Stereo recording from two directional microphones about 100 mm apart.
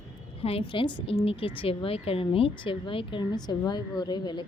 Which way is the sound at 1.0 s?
70° left (ahead or behind).